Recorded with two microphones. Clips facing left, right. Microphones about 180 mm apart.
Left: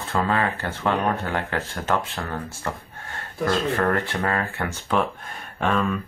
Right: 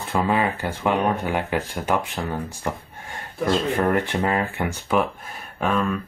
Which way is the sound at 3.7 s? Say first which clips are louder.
Right 2 dB; 15° right (ahead or behind).